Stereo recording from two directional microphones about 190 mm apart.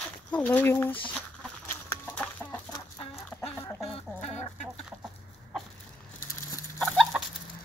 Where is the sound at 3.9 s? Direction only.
35° left (ahead or behind).